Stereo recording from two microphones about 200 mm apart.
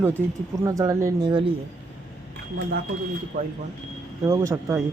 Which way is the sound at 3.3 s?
40° right (ahead or behind).